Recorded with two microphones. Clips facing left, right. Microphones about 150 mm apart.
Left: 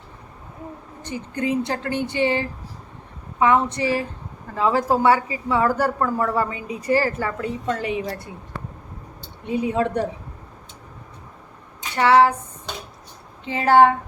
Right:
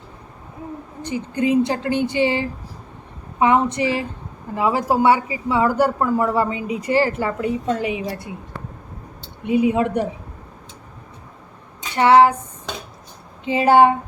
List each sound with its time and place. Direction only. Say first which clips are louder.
1.0 s speech: right 4 dB; 15° right (ahead or behind)
9.5 s speech: right 4 dB; 15° right (ahead or behind)
11.9 s a sound: right 3 dB; 20° right (ahead or behind)
13.4 s speech: right 2 dB; 15° right (ahead or behind)